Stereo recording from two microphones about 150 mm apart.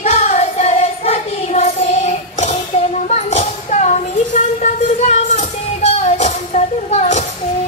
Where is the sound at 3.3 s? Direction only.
50° left (ahead or behind).